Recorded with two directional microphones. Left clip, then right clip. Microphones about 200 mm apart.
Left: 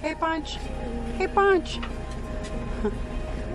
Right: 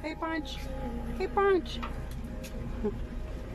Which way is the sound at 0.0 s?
Centre (ahead or behind).